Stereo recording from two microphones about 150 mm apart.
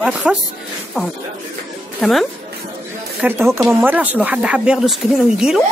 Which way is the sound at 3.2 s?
15° right (ahead or behind).